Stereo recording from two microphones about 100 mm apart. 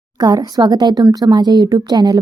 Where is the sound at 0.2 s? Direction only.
40° right (ahead or behind).